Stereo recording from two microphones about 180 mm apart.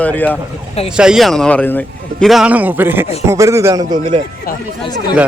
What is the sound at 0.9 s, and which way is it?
A man's voice, 5° right (ahead or behind).